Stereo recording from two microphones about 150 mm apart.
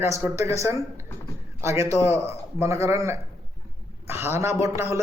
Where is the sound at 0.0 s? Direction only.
20° right (ahead or behind).